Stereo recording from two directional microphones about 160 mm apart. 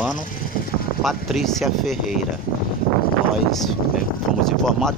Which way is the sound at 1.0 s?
Centre (ahead or behind).